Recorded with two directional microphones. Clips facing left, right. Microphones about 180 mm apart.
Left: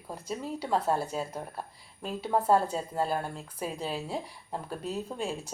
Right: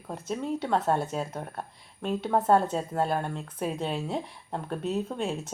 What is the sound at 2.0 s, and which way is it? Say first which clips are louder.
Speech: right 2 dB; centre (ahead or behind).